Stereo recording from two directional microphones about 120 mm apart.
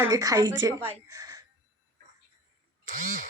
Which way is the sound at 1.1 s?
30° right (ahead or behind).